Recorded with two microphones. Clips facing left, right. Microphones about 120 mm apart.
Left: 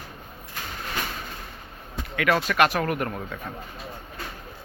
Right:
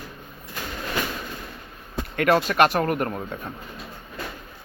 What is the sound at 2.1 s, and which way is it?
Speech, 40° right (ahead or behind).